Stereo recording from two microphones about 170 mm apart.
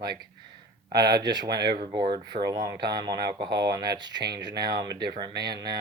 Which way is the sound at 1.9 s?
25° right (ahead or behind).